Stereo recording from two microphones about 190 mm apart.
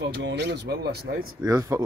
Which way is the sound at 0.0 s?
70° right (ahead or behind).